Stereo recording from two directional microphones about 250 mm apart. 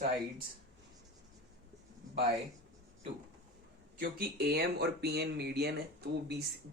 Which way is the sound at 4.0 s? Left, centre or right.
Right.